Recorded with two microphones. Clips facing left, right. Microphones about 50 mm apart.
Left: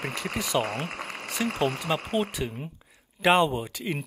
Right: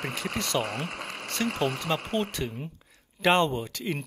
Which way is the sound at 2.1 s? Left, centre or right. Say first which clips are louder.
Left 1 dB; centre.